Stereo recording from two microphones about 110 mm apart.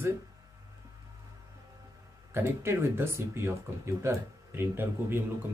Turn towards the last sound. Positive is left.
turn(degrees=-20)  # may be behind; listen again after turning